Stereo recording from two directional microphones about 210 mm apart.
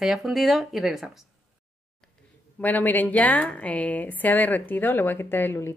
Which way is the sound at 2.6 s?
10° left (ahead or behind).